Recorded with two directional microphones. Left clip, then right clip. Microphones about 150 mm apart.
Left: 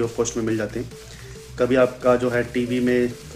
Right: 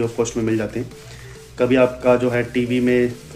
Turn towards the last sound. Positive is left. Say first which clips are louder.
# right 3 dB
turn(degrees=30)  # may be behind; listen again after turning